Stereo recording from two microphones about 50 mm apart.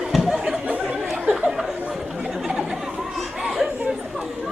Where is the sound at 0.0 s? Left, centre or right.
Centre.